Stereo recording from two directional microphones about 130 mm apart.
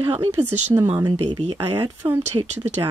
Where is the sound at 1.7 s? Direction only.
15° right (ahead or behind).